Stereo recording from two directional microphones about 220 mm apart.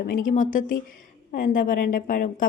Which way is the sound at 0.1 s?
40° left (ahead or behind).